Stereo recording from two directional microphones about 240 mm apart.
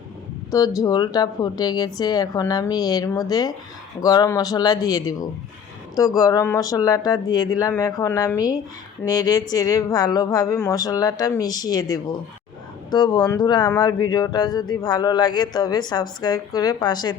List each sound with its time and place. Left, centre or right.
0.5 s speech: centre
6.1 s speech: centre